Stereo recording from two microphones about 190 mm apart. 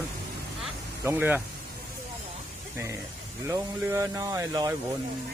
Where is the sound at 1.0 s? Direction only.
10° right (ahead or behind).